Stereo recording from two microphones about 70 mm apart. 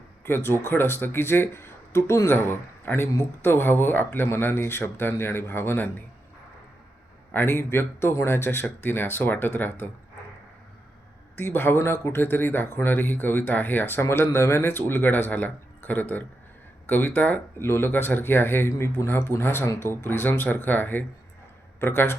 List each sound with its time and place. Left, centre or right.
0.3 s speech: left
7.3 s speech: left
11.3 s speech: left